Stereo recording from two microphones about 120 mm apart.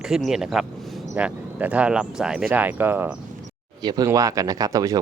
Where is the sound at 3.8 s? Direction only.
35° right (ahead or behind).